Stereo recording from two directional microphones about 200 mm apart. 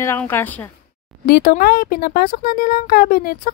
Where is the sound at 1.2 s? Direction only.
50° left (ahead or behind).